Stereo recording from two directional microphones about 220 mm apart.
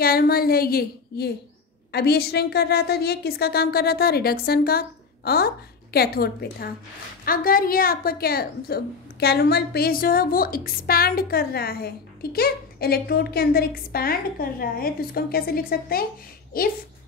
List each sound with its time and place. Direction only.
0.0 s a woman's voice: 45° left (ahead or behind)